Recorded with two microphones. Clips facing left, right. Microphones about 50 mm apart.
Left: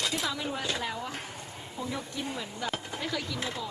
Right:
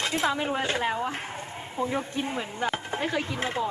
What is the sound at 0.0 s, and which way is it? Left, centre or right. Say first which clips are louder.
Speech: right 5 dB; right.